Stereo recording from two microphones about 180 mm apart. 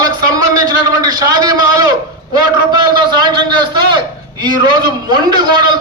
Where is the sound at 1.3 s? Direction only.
20° right (ahead or behind).